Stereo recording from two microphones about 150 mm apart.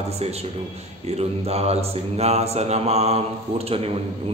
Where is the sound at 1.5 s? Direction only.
45° right (ahead or behind).